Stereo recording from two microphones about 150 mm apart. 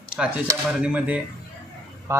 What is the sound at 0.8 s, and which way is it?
Speech, 10° right (ahead or behind).